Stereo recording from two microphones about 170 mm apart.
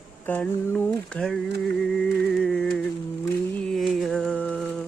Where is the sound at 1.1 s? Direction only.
5° left (ahead or behind).